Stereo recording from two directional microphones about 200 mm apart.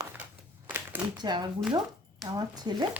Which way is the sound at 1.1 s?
20° right (ahead or behind).